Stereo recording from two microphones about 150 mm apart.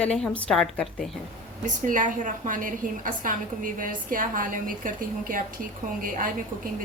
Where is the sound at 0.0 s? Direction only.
5° left (ahead or behind).